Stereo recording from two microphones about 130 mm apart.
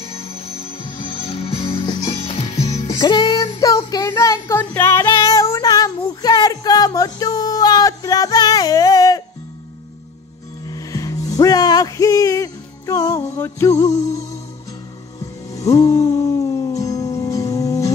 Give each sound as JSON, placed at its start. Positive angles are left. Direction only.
{"t": 0.0, "sound": "music", "side_deg": 50}
{"t": 3.0, "sound": "child singing", "side_deg": 35}
{"t": 10.7, "sound": "music", "side_deg": 25}
{"t": 15.5, "sound": "music", "side_deg": 25}